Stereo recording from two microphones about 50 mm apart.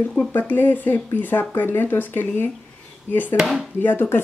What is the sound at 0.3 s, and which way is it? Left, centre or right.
Speech, left.